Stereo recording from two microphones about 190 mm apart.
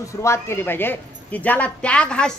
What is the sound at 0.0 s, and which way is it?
A woman's voice, 15° left (ahead or behind).